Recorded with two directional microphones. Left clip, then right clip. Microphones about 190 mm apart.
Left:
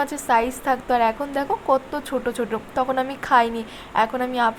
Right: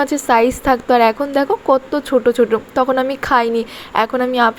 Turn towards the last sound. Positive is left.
turn(degrees=-20)  # may be behind; listen again after turning